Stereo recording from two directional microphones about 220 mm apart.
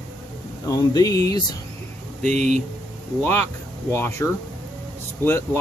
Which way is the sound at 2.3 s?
30° right (ahead or behind).